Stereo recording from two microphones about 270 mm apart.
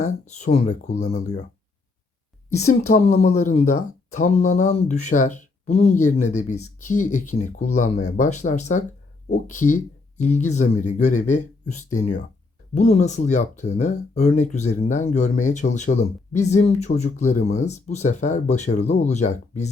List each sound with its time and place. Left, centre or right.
0.0 s speech: left
2.9 s speech: left
6.2 s speech: left
7.3 s speech: left
12.7 s speech: left